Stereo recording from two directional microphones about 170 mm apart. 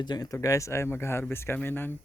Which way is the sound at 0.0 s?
25° left (ahead or behind).